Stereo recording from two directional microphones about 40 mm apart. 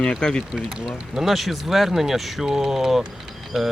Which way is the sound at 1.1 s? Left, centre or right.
Centre.